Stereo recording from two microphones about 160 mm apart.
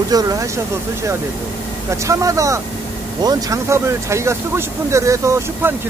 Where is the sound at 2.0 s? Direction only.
20° right (ahead or behind).